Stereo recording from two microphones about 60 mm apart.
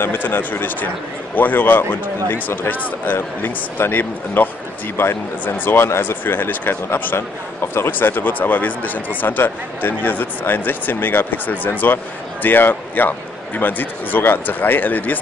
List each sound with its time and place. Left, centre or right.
0.0 s speech: left
3.2 s speech: left
4.9 s speech: left